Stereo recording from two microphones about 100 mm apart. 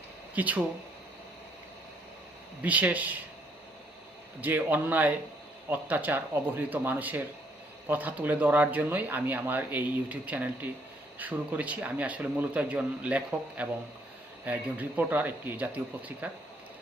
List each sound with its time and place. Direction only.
0.3 s speech: 15° right (ahead or behind)
2.6 s speech: 15° right (ahead or behind)
4.4 s speech: 15° right (ahead or behind)